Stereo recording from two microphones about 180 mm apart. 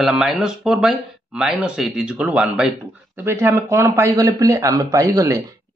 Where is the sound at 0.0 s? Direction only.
Centre (ahead or behind).